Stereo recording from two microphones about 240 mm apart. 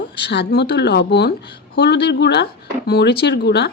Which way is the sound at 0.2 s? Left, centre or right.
Left.